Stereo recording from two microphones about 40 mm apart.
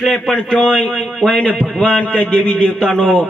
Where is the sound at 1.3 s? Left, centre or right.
Left.